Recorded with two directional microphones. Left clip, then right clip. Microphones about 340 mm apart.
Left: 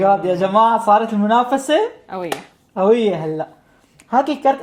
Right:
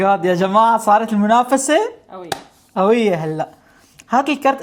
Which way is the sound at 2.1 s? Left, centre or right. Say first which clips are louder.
Left 7 dB; left.